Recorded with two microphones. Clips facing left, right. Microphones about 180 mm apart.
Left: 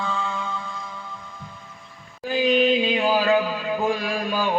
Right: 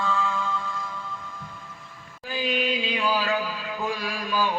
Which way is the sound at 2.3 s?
45° left (ahead or behind).